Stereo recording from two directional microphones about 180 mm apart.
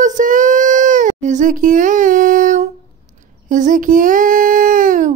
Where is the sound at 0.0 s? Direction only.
45° right (ahead or behind).